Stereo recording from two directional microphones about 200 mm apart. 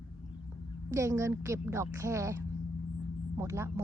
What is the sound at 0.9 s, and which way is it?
Speech, 15° right (ahead or behind).